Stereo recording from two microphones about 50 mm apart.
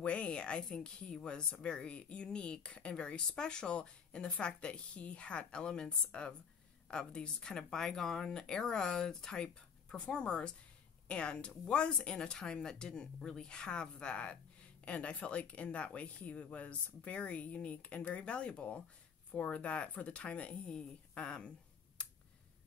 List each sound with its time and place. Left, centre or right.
0.0 s speech: left